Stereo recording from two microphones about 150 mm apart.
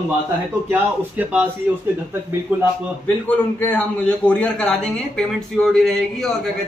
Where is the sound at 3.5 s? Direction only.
10° left (ahead or behind).